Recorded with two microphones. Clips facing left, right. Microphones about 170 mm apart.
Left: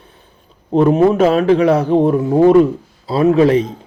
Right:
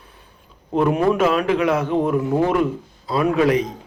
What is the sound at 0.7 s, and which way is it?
A man's voice, 30° left (ahead or behind).